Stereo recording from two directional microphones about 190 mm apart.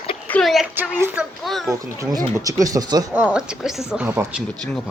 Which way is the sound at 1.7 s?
20° right (ahead or behind).